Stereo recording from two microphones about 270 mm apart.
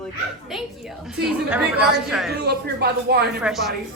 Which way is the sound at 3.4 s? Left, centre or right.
Centre.